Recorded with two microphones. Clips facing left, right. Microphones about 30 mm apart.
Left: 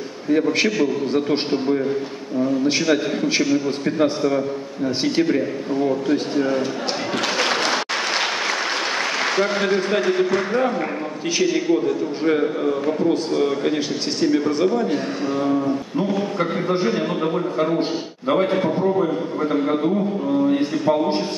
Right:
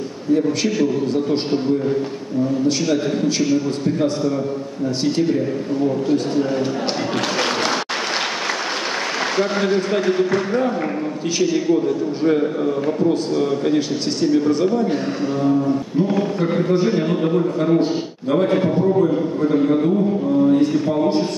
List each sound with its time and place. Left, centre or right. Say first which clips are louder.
0.3 s a man's voice: even; left
0.7 s a man's voice: right 1 dB; centre
2.6 s a man's voice: even; left
3.8 s a man's voice: even; left
7.3 s applause: left 1 dB; centre
9.2 s a man's voice: right 1 dB; centre
16.8 s a man's voice: right 2 dB; centre
18.5 s a man's voice: right 2 dB; centre
19.0 s a man's voice: right 3 dB; left